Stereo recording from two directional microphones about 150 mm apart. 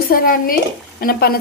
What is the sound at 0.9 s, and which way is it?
Speech, 80° left.